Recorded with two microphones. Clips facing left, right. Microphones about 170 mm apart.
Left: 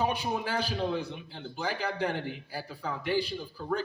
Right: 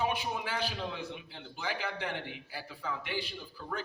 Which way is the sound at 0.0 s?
40° left (ahead or behind).